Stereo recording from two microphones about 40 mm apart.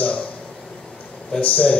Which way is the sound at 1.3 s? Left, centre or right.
Left.